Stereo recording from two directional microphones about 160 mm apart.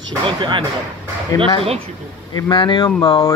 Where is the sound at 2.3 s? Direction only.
25° left (ahead or behind).